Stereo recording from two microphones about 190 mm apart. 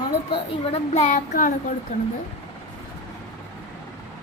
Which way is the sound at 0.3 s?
35° left (ahead or behind).